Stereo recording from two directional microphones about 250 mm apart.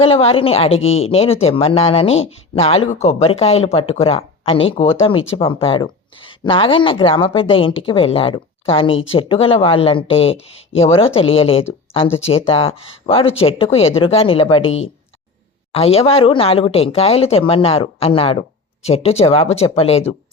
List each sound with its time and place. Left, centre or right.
0.0 s a woman's voice: left
14.6 s speech: left
15.7 s a woman's voice: left